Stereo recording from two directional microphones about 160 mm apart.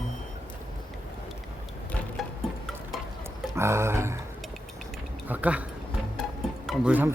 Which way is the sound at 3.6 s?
15° right (ahead or behind).